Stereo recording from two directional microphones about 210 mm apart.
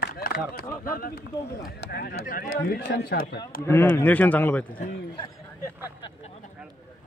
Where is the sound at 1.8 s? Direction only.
45° left (ahead or behind).